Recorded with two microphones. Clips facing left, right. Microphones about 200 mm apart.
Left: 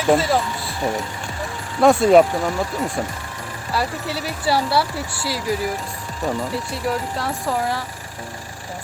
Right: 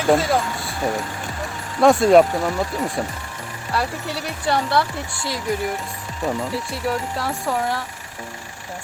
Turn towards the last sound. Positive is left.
turn(degrees=0)  # may be behind; listen again after turning